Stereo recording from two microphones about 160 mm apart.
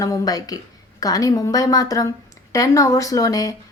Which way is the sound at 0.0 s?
20° left (ahead or behind).